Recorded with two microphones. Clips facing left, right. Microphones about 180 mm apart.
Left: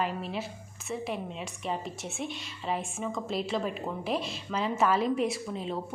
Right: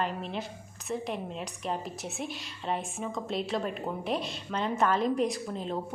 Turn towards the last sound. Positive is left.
turn(degrees=0)  # may be behind; listen again after turning